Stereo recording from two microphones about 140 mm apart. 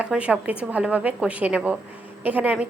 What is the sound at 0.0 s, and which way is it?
A woman's voice, 10° right (ahead or behind).